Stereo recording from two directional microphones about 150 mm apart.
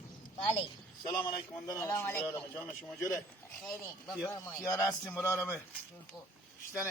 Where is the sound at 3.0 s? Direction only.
20° left (ahead or behind).